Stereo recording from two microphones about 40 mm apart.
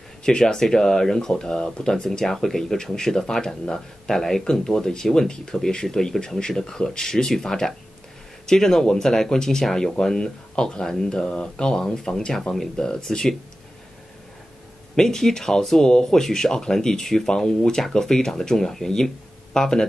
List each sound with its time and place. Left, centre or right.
0.2 s speech: centre
2.0 s speech: centre
12.1 s speech: left
15.0 s speech: centre